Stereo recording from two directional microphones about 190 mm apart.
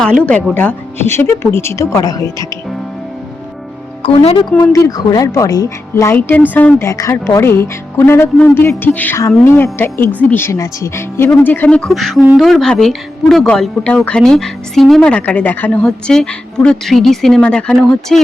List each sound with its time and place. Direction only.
0.3 s speech: 5° left (ahead or behind)
4.0 s speech: 30° left (ahead or behind)
4.6 s speech: 15° left (ahead or behind)